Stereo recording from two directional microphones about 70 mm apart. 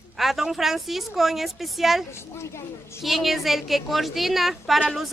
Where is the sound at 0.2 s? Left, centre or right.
Centre.